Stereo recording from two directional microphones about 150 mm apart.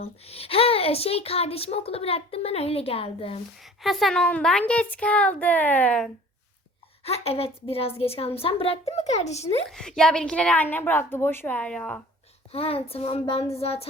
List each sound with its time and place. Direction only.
0.3 s a child's voice: 40° left (ahead or behind)
3.6 s a woman's voice: centre (ahead or behind)
7.0 s a child's voice: 40° left (ahead or behind)
9.6 s a woman's voice: 5° left (ahead or behind)
12.5 s a child's voice: 40° left (ahead or behind)